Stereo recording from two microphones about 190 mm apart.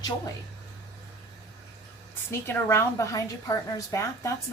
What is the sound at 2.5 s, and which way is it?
A woman's voice, 15° left (ahead or behind).